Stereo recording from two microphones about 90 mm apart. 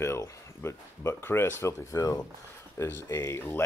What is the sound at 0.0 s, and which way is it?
Speech, 30° left (ahead or behind).